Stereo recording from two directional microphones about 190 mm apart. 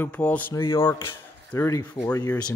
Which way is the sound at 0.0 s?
5° left (ahead or behind).